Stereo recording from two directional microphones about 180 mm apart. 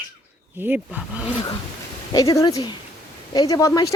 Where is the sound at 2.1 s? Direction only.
20° left (ahead or behind).